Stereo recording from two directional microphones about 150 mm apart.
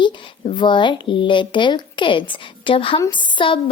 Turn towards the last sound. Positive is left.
turn(degrees=35)  # may be behind; listen again after turning